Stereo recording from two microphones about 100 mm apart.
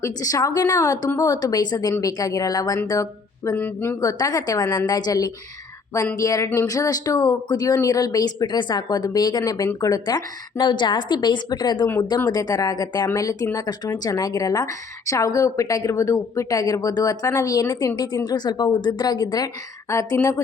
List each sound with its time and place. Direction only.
0.0 s speech: 35° left (ahead or behind)
3.5 s speech: 20° left (ahead or behind)
4.0 s a woman's voice: 35° left (ahead or behind)